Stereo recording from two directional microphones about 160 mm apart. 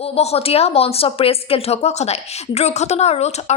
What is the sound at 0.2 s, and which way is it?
A woman's voice, 40° left (ahead or behind).